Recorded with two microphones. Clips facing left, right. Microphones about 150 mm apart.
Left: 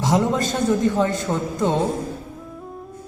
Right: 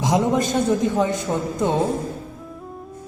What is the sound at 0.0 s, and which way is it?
A man's voice, 20° right (ahead or behind).